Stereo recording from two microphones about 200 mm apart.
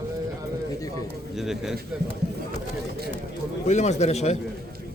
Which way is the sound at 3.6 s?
35° left (ahead or behind).